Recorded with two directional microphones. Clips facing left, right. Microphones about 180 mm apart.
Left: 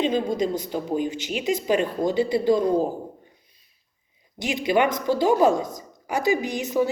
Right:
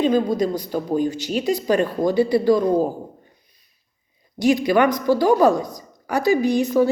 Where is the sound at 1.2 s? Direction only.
40° right (ahead or behind).